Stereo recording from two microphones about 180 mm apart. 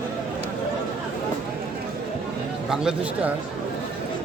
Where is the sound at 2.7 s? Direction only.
5° right (ahead or behind).